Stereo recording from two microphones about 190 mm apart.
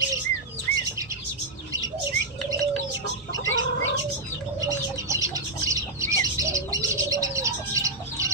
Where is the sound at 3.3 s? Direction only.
90° left.